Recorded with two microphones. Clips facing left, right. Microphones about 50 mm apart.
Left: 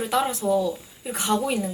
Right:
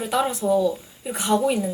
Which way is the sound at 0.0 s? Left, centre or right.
Centre.